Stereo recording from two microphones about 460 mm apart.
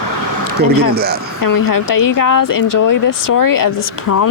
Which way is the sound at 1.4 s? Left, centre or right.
Left.